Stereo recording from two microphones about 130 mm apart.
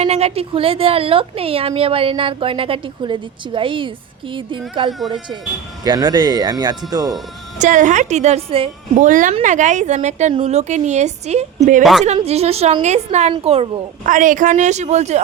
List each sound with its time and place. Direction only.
0.0 s a woman's voice: 55° right (ahead or behind); by 7.2 s 30° right (ahead or behind)
7.6 s a woman's voice: 75° right (ahead or behind); by 8.7 s 45° right (ahead or behind)
9.0 s speech: 85° right
9.4 s a woman's voice: 70° right (ahead or behind)
11.8 s a woman's voice: centre (ahead or behind)
12.0 s a woman's voice: 55° right (ahead or behind)
14.0 s speech: 85° right; by 15.2 s 60° right (ahead or behind)